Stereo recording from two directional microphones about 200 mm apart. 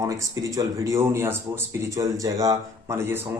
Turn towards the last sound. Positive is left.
turn(degrees=-15)  # may be behind; listen again after turning